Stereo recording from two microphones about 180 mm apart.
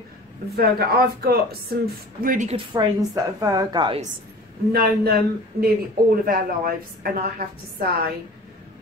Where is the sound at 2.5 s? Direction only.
20° right (ahead or behind).